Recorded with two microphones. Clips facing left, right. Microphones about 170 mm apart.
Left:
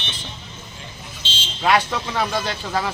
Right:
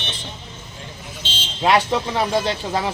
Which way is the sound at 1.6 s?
25° right (ahead or behind).